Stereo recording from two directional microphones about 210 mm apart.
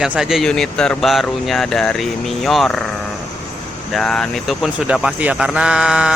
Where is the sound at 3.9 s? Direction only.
5° left (ahead or behind).